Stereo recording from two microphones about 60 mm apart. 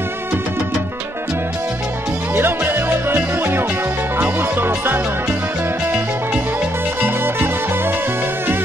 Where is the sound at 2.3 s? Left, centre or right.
Right.